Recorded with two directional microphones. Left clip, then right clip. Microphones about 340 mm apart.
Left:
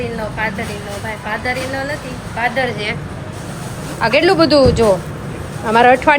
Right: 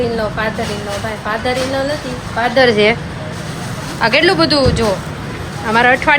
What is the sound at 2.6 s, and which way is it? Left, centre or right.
Speech, centre.